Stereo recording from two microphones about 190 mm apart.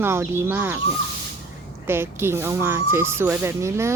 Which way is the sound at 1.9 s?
10° right (ahead or behind).